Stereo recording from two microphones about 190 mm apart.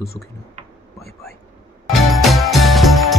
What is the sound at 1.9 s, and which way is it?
Music, centre (ahead or behind).